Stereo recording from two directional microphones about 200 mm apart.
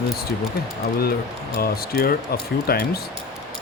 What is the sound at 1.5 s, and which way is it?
Speech, 50° left (ahead or behind).